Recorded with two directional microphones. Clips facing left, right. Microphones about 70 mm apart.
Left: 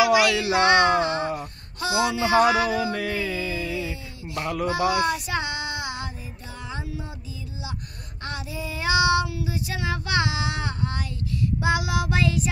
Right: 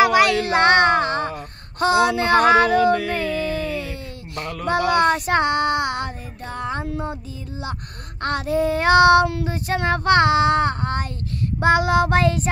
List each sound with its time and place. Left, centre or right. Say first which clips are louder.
0.0 s a sound: right 3 dB; right
1.4 s speech: right 9 dB; right
2.8 s a sound: right 8 dB; centre
4.4 s speech: left 2 dB; centre
4.6 s child singing: right 6 dB; right
8.2 s child singing: right 12 dB; right